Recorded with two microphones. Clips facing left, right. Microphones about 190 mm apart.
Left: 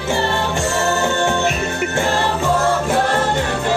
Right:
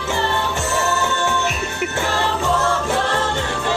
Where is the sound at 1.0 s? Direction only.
50° left (ahead or behind).